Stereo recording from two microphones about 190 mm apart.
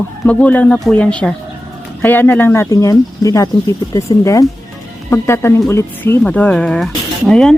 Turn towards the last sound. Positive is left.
turn(degrees=0)  # may be behind; listen again after turning